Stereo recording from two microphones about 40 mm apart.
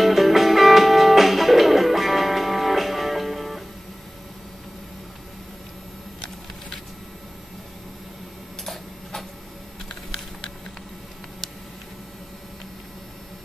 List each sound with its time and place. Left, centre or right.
0.0 s music: centre